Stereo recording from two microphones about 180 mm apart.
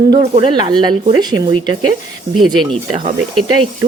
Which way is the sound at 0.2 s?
25° right (ahead or behind).